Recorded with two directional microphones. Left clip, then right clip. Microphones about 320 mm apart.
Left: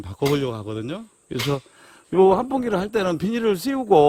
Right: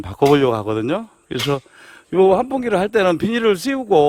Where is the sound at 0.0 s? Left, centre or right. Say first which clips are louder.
Right 9 dB; centre.